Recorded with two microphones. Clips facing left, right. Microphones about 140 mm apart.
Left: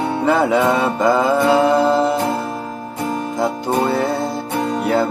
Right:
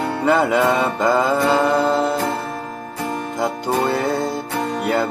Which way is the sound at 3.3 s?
Centre (ahead or behind).